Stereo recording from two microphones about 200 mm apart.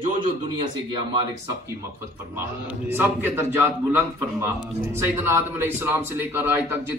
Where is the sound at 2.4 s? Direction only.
10° right (ahead or behind).